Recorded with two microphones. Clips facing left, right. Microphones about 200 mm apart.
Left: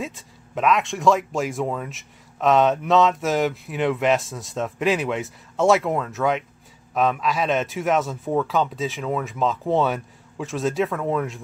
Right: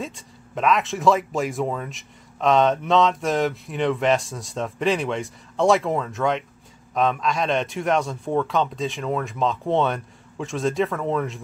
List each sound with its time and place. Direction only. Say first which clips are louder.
0.0 s speech: left 1 dB; centre (ahead or behind)